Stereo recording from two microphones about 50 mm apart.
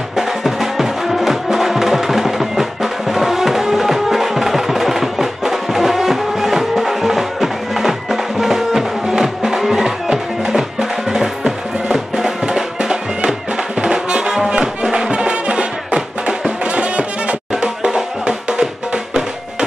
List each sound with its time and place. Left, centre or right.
0.1 s music: centre